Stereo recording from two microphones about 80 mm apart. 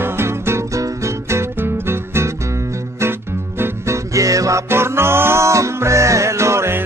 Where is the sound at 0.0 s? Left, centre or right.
Right.